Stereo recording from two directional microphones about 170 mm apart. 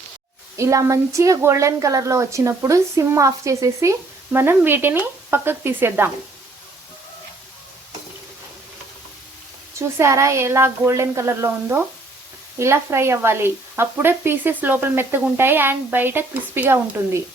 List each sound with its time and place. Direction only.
0.5 s speech: 20° right (ahead or behind)
9.7 s speech: 15° right (ahead or behind)